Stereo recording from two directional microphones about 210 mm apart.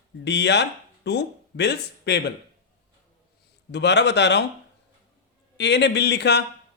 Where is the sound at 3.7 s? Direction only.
55° left (ahead or behind).